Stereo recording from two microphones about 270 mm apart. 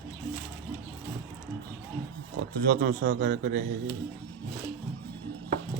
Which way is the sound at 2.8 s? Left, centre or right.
Right.